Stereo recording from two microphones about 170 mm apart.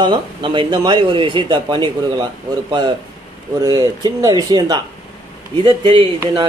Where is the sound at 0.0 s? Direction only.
25° right (ahead or behind).